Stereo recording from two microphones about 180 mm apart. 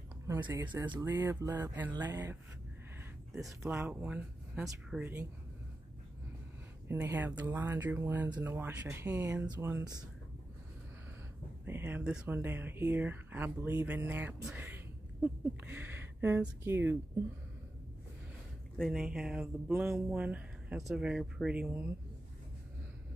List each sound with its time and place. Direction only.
0.7 s speech: 25° right (ahead or behind)
1.0 s speech: 10° right (ahead or behind)
3.6 s speech: 15° right (ahead or behind)
6.9 s speech: 10° right (ahead or behind)
11.6 s speech: 10° right (ahead or behind)
18.8 s speech: 5° right (ahead or behind)